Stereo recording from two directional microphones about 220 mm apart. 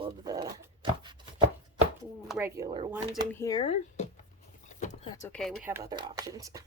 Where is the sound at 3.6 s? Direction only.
30° left (ahead or behind).